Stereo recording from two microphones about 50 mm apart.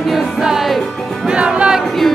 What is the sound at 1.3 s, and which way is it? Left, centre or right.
Music, centre.